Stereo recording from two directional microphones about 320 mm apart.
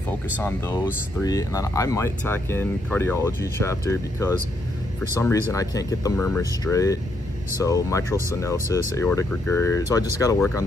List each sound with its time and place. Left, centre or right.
0.4 s speech: centre